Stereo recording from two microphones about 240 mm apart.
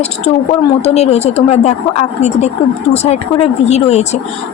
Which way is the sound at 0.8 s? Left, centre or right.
Left.